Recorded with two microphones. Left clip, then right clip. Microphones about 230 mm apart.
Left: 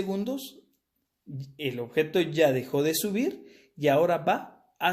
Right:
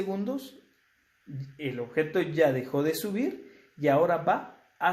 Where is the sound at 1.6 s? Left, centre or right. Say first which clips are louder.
Left 2 dB; left.